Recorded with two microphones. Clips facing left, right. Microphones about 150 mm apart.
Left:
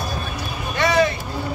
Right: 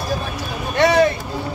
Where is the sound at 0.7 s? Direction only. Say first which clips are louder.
Right 4 dB; 60° right (ahead or behind).